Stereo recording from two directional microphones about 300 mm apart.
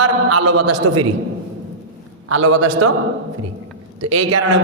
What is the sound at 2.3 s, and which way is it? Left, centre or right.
Speech, right.